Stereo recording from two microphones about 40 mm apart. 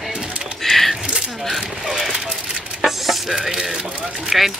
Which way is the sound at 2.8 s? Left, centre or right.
Centre.